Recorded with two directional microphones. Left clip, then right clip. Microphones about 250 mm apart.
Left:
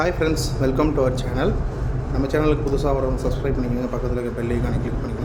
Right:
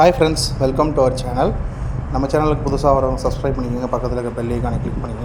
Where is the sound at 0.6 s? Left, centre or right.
Centre.